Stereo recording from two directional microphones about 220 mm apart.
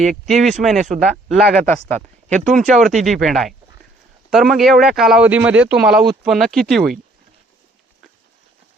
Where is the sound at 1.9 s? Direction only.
35° right (ahead or behind).